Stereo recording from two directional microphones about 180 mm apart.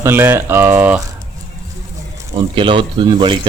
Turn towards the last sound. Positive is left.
turn(degrees=-25)  # may be behind; listen again after turning